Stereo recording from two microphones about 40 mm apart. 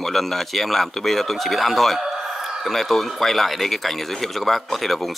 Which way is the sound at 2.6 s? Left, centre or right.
Centre.